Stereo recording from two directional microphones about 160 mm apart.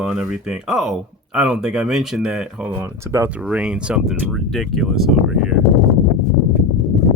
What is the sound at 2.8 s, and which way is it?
Speech, 15° right (ahead or behind).